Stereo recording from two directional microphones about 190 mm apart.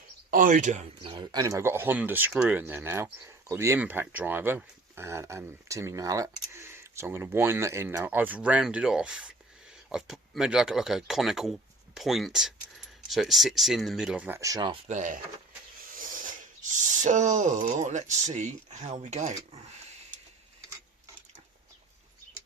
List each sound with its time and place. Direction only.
0.3 s speech: 45° right (ahead or behind)
1.0 s speech: 25° right (ahead or behind); by 15.2 s 40° right (ahead or behind)
17.0 s speech: 40° right (ahead or behind)